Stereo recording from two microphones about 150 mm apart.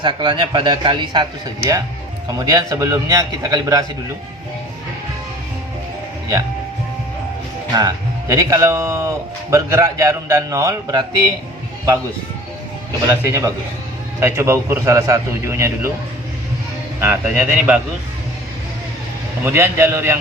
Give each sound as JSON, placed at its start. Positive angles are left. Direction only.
{"t": 0.0, "sound": "a man's voice", "side_deg": -30}
{"t": 2.4, "sound": "speech", "side_deg": -25}
{"t": 7.7, "sound": "speech", "side_deg": -25}
{"t": 13.1, "sound": "speech", "side_deg": -20}
{"t": 17.0, "sound": "a man's voice", "side_deg": -15}
{"t": 19.5, "sound": "a man's voice", "side_deg": -15}